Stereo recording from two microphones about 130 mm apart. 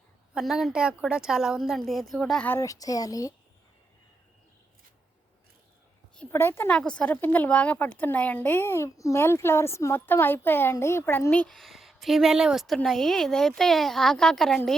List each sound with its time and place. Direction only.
0.3 s a woman's voice: 5° right (ahead or behind)
2.5 s a child's voice: 25° left (ahead or behind)
6.3 s a woman's voice: 20° left (ahead or behind)